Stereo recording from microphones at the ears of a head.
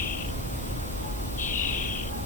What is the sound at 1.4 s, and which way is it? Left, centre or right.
Owl, left.